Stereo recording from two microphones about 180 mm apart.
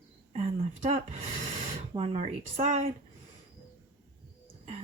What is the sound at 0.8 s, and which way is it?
A woman's voice, 35° right (ahead or behind).